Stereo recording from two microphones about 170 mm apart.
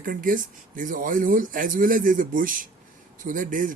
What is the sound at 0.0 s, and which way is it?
A man's voice, 55° right (ahead or behind).